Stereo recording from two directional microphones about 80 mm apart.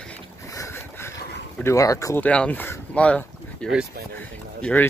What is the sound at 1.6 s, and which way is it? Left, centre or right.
Speech, left.